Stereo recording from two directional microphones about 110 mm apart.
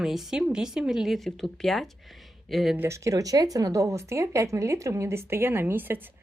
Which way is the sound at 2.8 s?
25° right (ahead or behind).